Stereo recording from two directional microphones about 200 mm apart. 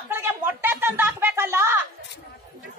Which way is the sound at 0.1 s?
10° right (ahead or behind).